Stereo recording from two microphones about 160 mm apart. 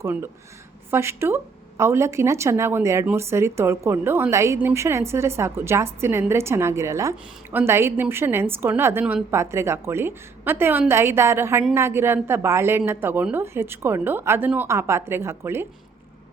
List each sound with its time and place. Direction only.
0.0 s speech: 15° right (ahead or behind)